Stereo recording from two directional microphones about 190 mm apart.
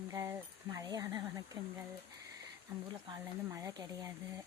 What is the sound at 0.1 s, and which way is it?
Speech, 15° right (ahead or behind).